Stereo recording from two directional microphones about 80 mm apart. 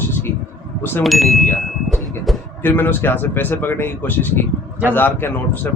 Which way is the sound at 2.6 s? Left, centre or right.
Left.